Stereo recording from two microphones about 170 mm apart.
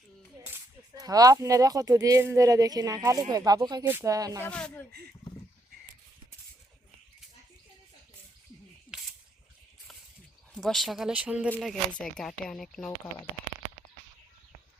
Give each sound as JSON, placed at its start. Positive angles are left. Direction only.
{"t": 0.4, "sound": "speech", "side_deg": -15}
{"t": 4.4, "sound": "speech", "side_deg": 5}
{"t": 4.9, "sound": "speech", "side_deg": -65}
{"t": 8.9, "sound": "camera", "side_deg": -5}
{"t": 10.5, "sound": "speech", "side_deg": 0}
{"t": 11.5, "sound": "speech", "side_deg": 5}